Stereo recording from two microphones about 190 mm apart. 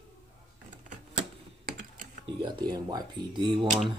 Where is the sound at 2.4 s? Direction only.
25° right (ahead or behind).